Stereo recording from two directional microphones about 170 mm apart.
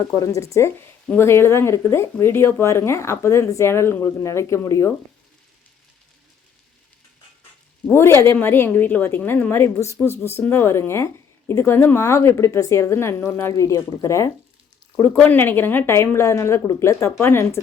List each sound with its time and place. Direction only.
0.2 s a woman's voice: 20° left (ahead or behind)
7.9 s a woman's voice: 15° left (ahead or behind)